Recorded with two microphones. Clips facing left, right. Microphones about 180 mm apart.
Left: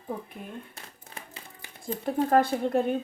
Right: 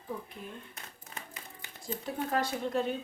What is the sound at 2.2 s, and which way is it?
Speech, 55° left (ahead or behind).